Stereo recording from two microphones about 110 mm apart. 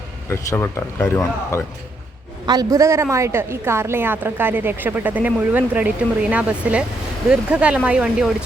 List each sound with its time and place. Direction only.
0.5 s speech: 30° left (ahead or behind)
2.5 s a woman's voice: 35° right (ahead or behind); by 8.4 s 5° right (ahead or behind)